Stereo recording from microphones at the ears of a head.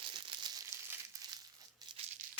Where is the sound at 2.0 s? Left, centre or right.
Right.